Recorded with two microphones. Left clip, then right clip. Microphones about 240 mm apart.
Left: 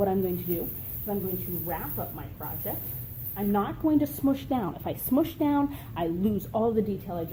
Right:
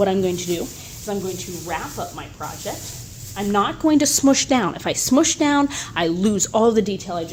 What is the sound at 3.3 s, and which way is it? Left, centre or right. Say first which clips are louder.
A woman's voice: right 9 dB; right.